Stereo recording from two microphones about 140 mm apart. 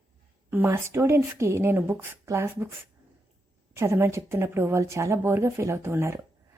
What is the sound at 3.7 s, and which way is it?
A woman's voice, 20° right (ahead or behind).